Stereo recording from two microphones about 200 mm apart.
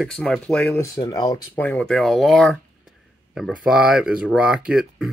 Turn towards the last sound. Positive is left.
turn(degrees=-5)  # may be behind; listen again after turning